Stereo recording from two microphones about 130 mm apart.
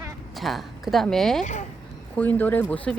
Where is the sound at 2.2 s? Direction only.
15° left (ahead or behind).